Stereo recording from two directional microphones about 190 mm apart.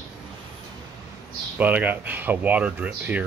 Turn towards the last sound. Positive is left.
turn(degrees=-10)  # may be behind; listen again after turning